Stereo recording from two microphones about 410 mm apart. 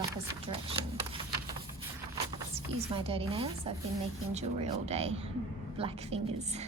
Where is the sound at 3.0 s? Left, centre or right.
Centre.